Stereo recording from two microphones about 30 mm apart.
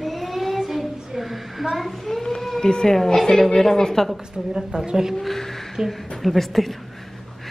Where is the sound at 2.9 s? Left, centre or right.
Centre.